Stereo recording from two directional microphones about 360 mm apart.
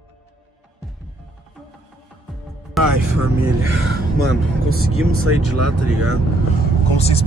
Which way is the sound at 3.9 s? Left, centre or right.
Right.